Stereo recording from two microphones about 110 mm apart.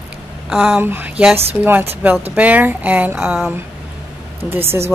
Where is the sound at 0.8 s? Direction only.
20° right (ahead or behind).